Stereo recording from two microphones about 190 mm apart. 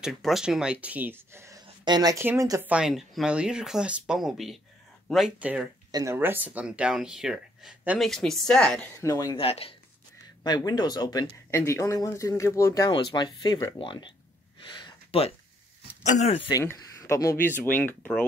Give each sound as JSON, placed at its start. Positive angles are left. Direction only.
{"t": 0.0, "sound": "speech", "side_deg": 0}
{"t": 2.7, "sound": "speech", "side_deg": -5}
{"t": 5.9, "sound": "speech", "side_deg": -15}
{"t": 9.0, "sound": "speech", "side_deg": 20}
{"t": 9.5, "sound": "speech", "side_deg": 30}
{"t": 14.9, "sound": "a sound", "side_deg": 30}
{"t": 16.0, "sound": "speech", "side_deg": 35}
{"t": 16.5, "sound": "speech", "side_deg": 15}